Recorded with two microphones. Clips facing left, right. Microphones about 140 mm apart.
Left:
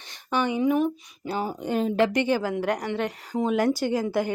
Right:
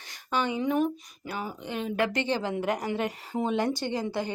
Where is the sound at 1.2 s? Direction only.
30° left (ahead or behind).